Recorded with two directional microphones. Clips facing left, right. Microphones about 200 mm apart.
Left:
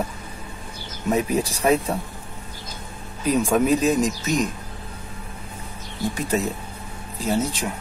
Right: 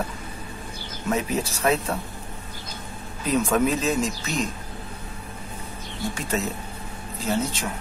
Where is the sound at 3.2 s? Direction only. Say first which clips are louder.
Left 3 dB; 15° left (ahead or behind).